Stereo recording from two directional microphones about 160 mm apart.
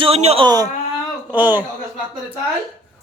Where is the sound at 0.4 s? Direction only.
25° right (ahead or behind).